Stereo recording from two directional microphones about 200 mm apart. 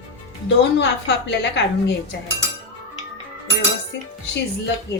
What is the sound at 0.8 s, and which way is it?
Speech, 60° left (ahead or behind).